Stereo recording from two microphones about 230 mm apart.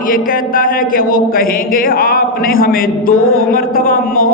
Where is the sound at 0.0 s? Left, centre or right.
Left.